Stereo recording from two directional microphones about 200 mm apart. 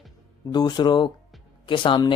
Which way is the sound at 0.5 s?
20° left (ahead or behind).